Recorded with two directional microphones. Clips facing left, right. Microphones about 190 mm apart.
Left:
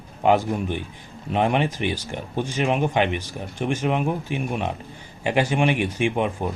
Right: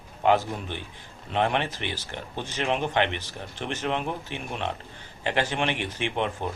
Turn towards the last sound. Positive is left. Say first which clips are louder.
# left 5 dB
turn(degrees=10)  # may be behind; listen again after turning